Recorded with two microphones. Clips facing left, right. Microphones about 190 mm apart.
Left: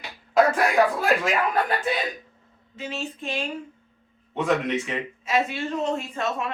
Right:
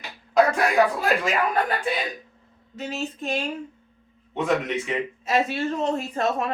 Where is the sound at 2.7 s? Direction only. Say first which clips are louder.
Right 2 dB; 40° right (ahead or behind).